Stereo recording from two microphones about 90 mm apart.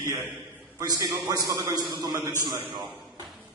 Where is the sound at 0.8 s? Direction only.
45° right (ahead or behind).